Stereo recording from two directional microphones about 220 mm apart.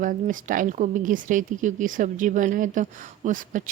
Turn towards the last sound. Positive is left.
turn(degrees=-35)  # may be behind; listen again after turning